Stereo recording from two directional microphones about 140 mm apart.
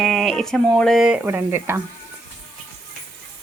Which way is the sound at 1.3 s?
15° right (ahead or behind).